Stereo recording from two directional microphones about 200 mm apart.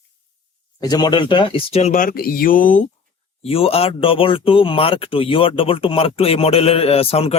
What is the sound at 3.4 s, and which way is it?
Speech, 30° left (ahead or behind).